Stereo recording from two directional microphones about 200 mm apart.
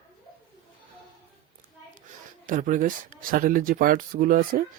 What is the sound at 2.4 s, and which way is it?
Speech, 40° right (ahead or behind).